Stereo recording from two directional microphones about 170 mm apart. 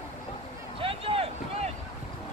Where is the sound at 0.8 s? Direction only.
35° right (ahead or behind).